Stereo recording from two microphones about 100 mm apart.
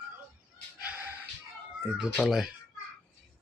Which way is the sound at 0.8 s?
15° right (ahead or behind).